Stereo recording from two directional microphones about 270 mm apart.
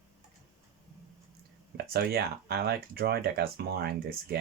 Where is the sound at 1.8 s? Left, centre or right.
Right.